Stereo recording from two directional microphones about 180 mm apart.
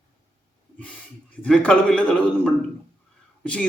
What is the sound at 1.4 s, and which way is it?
Speech, 5° left (ahead or behind).